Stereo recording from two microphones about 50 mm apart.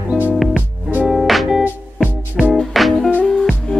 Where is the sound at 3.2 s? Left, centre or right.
Centre.